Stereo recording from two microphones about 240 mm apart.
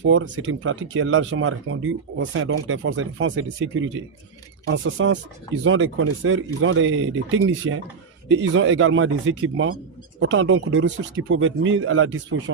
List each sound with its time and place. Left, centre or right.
0.1 s speech: right